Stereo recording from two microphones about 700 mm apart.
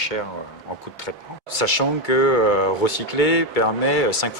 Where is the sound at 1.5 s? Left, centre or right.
Left.